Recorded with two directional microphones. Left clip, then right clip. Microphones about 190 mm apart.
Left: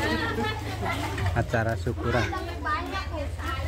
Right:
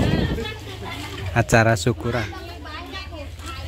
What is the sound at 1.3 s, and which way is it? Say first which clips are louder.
Speech: right 12 dB; 30° right (ahead or behind).